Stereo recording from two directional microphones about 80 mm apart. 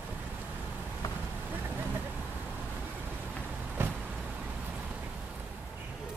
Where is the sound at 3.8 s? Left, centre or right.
Right.